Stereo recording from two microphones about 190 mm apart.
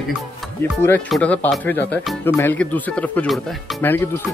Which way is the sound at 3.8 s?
10° left (ahead or behind).